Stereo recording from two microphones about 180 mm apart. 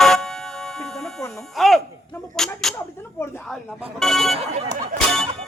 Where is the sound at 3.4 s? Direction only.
Centre (ahead or behind).